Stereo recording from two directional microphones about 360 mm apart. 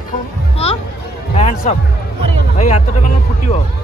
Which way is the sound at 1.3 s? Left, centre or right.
Centre.